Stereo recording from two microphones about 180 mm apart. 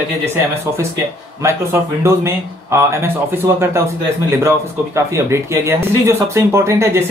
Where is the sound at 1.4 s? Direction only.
15° right (ahead or behind).